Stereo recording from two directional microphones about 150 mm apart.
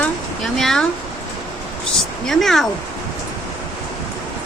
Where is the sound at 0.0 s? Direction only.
Centre (ahead or behind).